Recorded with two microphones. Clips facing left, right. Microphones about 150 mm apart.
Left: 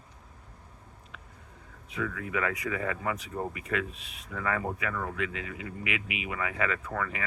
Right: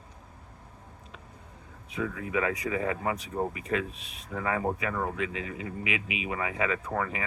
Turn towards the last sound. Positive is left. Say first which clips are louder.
# right 3 dB
turn(degrees=-25)  # may be behind; listen again after turning